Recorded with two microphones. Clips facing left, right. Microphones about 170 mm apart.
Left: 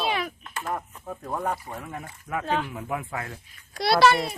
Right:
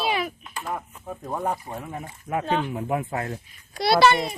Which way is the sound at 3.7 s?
Centre (ahead or behind).